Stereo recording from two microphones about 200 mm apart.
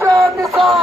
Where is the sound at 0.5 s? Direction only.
Centre (ahead or behind).